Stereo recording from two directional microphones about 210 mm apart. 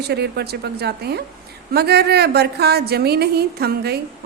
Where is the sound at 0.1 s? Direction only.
50° right (ahead or behind).